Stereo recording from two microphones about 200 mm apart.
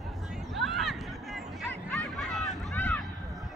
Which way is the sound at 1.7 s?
Centre (ahead or behind).